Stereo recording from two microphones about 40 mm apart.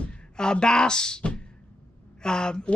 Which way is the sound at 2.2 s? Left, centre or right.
Centre.